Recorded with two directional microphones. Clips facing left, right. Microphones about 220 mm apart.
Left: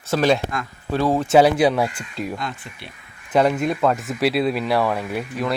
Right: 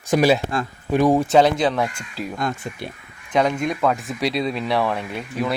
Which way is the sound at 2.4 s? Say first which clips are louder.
Right 6 dB; 45° right (ahead or behind).